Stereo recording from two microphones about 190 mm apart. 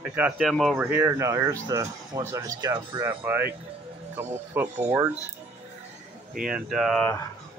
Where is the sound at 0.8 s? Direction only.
10° right (ahead or behind).